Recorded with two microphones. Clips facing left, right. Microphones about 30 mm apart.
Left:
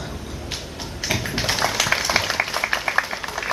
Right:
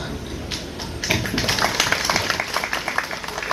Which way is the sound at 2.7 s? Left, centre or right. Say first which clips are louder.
Left 2 dB; centre.